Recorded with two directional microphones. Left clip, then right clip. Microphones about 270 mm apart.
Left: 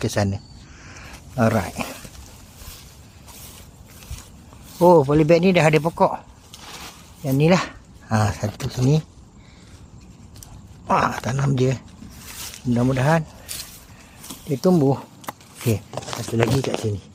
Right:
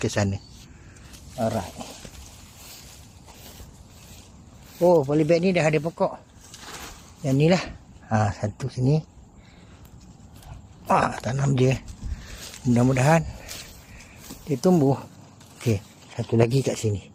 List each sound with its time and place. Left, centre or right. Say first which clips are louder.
0.0 s speech: left 2 dB; centre
1.4 s speech: left 6 dB; left
4.8 s speech: left 5 dB; left
7.3 s speech: left 3 dB; centre
10.8 s speech: left 2 dB; centre
14.5 s speech: left 2 dB; centre
16.4 s speech: left 1 dB; centre